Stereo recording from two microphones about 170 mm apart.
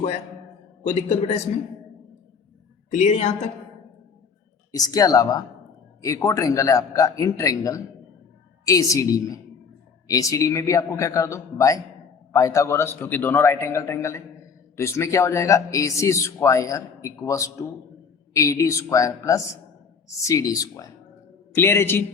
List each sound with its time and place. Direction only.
2.9 s a woman's voice: 45° left (ahead or behind)
4.7 s a man's voice: 20° left (ahead or behind)